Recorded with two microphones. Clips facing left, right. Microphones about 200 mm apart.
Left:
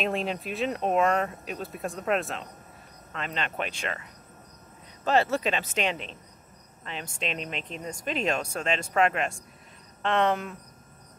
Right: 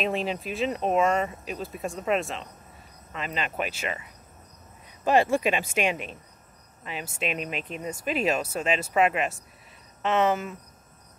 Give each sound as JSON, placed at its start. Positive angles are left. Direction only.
{"t": 0.0, "sound": "speech", "side_deg": 0}